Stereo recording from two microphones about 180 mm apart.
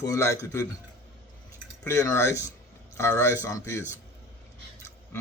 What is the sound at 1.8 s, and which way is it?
Speech, 15° left (ahead or behind).